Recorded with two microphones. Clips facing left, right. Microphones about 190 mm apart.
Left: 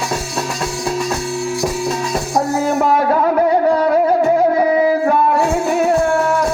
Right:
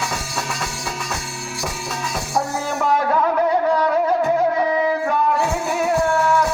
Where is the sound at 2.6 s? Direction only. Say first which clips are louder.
Left 5 dB; 55° left (ahead or behind).